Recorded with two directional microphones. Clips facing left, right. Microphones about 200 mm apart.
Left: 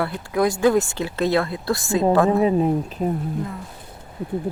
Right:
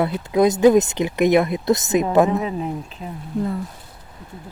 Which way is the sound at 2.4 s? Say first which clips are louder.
Left 7 dB; 35° left (ahead or behind).